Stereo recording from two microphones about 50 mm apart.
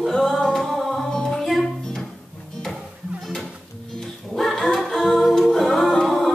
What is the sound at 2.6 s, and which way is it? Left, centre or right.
Music, centre.